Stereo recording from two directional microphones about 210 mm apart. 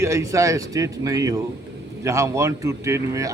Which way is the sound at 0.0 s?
15° right (ahead or behind).